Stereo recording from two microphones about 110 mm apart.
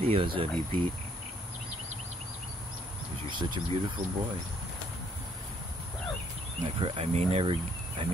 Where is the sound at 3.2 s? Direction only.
45° right (ahead or behind).